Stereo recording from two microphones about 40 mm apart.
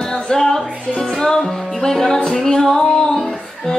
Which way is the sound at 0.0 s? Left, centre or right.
Centre.